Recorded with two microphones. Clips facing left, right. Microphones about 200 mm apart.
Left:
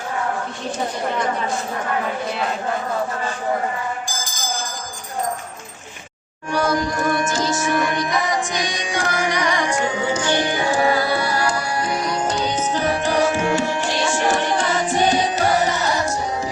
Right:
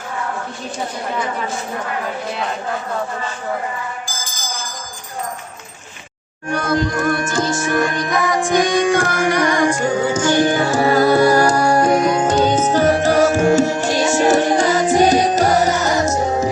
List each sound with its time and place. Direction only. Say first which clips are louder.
6.5 s music: right 2 dB; 55° right (ahead or behind)